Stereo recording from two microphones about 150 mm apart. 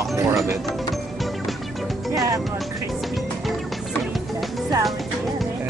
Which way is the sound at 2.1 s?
20° right (ahead or behind).